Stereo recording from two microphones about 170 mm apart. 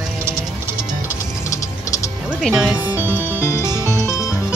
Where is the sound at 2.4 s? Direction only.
5° right (ahead or behind).